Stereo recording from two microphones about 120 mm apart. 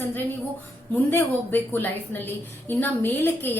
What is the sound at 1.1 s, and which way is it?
A woman's voice, 15° left (ahead or behind).